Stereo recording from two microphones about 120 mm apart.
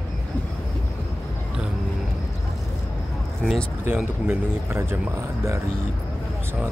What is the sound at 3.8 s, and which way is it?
Speech, 15° right (ahead or behind).